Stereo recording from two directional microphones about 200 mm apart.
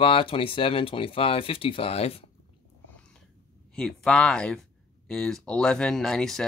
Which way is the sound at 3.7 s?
5° left (ahead or behind).